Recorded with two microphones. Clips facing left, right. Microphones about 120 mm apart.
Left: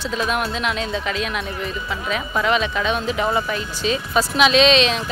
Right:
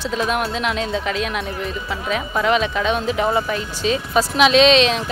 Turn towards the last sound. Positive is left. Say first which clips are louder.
# right 2 dB
turn(degrees=-55)  # may be behind; listen again after turning